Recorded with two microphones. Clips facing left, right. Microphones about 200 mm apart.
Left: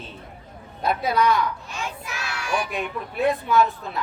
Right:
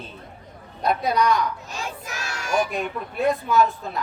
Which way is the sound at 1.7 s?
40° right (ahead or behind).